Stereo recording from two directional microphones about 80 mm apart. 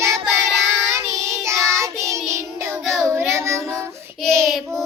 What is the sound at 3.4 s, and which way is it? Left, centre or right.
Child singing, right.